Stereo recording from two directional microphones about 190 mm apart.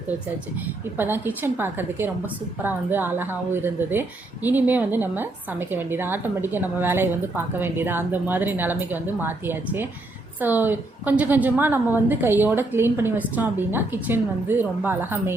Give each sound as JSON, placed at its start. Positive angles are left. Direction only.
{"t": 0.9, "sound": "a woman's voice", "side_deg": -10}